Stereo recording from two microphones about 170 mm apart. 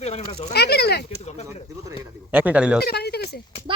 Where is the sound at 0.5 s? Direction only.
70° left (ahead or behind).